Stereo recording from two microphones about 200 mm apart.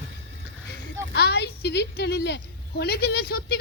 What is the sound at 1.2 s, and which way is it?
A woman's voice, 55° left (ahead or behind).